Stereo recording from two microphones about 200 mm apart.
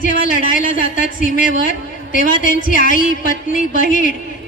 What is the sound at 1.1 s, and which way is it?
A woman's voice, 40° left (ahead or behind).